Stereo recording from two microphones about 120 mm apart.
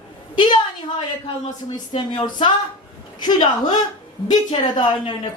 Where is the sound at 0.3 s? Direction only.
45° left (ahead or behind).